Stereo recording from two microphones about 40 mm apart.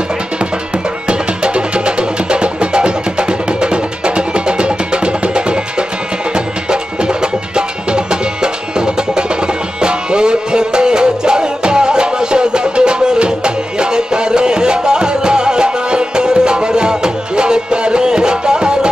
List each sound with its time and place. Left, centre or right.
1.0 s music: right